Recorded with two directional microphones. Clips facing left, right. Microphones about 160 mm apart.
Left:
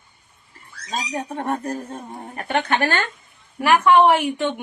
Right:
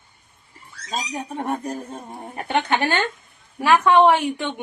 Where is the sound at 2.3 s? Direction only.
20° right (ahead or behind).